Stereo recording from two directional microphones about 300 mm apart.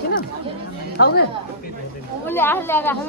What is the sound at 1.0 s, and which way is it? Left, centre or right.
Speech, left.